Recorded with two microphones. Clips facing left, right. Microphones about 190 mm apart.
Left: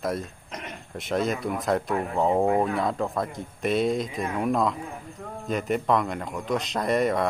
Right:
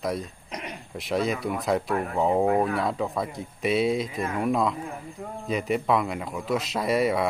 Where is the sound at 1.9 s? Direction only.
15° left (ahead or behind).